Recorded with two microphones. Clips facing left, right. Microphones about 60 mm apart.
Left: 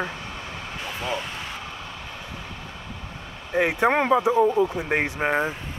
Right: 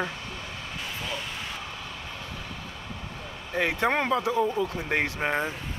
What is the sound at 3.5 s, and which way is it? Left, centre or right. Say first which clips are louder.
Speech: left 5 dB; centre.